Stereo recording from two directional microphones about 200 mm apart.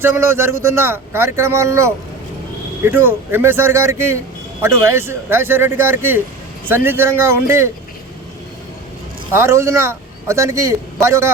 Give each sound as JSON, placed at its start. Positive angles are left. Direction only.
{"t": 0.0, "sound": "a man's voice", "side_deg": -10}
{"t": 9.3, "sound": "a man's voice", "side_deg": -15}